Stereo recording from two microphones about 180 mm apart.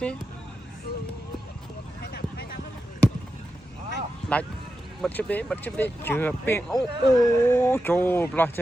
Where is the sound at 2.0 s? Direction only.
65° left (ahead or behind).